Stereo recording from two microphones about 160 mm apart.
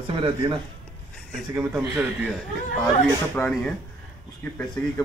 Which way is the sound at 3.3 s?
10° left (ahead or behind).